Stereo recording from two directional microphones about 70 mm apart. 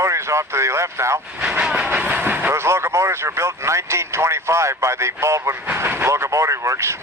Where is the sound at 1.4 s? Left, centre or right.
Centre.